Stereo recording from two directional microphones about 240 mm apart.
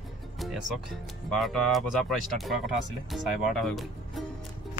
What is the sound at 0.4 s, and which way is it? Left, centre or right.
Music, centre.